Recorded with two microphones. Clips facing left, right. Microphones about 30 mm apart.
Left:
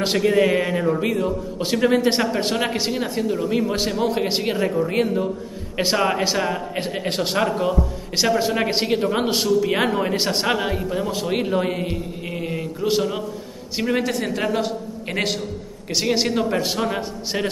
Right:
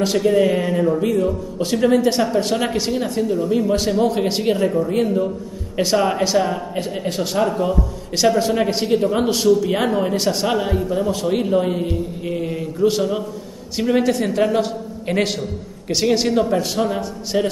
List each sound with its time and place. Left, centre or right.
0.0 s a man's voice: left
2.5 s a man's voice: centre
5.8 s a man's voice: centre
6.8 s a man's voice: left
7.6 s a man's voice: centre
10.6 s a man's voice: centre